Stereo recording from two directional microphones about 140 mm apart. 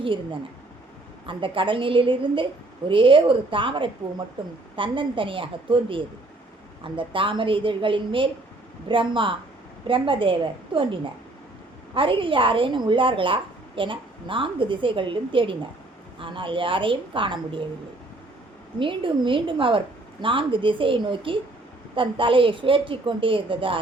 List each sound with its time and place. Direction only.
0.0 s a woman's voice: 35° right (ahead or behind)
11.9 s a woman's voice: 40° right (ahead or behind)
18.8 s a woman's voice: 35° right (ahead or behind)